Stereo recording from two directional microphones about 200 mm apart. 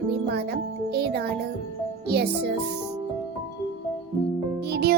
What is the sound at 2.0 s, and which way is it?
Music, 55° right (ahead or behind).